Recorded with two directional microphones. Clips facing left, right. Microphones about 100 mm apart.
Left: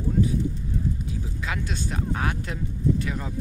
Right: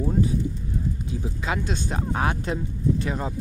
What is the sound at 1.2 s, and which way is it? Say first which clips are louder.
Speech: right 4 dB; 25° right (ahead or behind).